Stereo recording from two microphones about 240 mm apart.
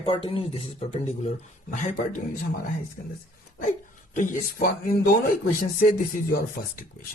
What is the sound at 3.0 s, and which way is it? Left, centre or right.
Speech, left.